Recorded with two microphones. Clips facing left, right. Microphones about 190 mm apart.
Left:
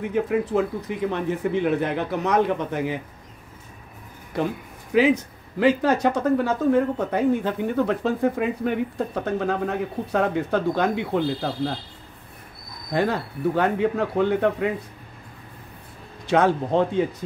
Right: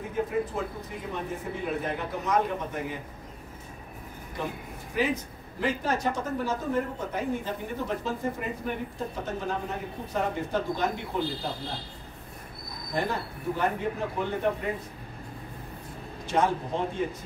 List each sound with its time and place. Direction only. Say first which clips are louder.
0.1 s speech: left 6 dB; 85° left
4.9 s speech: left 10 dB; 90° left
12.9 s speech: left 7 dB; 75° left (ahead or behind)
16.3 s speech: left 7 dB; 75° left (ahead or behind)